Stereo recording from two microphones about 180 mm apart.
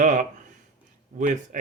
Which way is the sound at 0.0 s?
40° right (ahead or behind).